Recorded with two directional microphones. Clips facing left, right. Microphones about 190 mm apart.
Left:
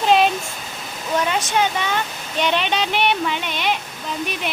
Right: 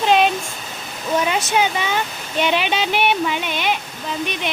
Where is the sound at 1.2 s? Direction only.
10° right (ahead or behind).